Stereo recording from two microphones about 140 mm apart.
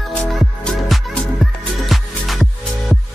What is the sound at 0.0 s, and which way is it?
Music, centre (ahead or behind).